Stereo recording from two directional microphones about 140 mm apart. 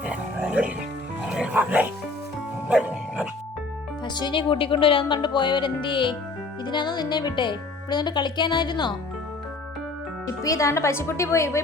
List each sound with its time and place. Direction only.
0.0 s music: 10° right (ahead or behind)
4.0 s speech: 30° left (ahead or behind)
10.4 s a woman's voice: 20° left (ahead or behind)